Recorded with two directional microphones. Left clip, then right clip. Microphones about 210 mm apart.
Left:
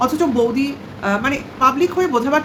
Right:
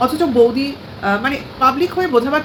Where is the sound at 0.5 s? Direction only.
10° left (ahead or behind).